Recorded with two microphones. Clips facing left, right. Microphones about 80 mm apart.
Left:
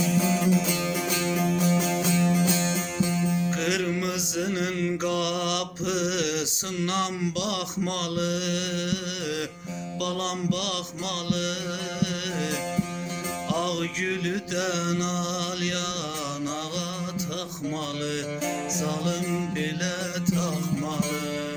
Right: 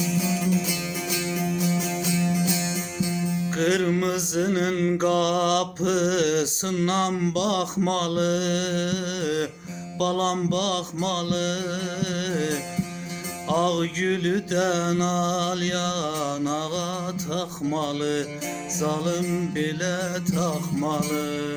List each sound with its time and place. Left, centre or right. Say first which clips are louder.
0.0 s music: left 2 dB; left
2.3 s music: left 1 dB; left
3.6 s mantra: right 5 dB; right
10.0 s music: right 6 dB; right
17.3 s music: right 5 dB; right